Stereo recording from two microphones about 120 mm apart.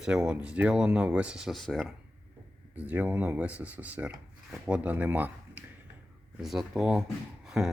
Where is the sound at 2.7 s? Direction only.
10° right (ahead or behind).